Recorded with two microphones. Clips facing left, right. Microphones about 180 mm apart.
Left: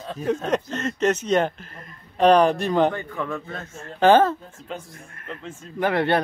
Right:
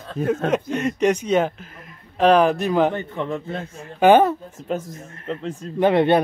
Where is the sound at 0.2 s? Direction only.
55° right (ahead or behind).